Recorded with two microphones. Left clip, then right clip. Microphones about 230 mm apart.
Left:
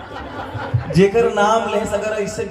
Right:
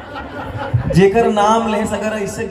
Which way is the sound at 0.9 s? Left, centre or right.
Right.